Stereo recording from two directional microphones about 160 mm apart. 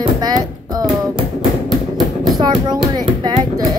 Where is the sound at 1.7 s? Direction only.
Centre (ahead or behind).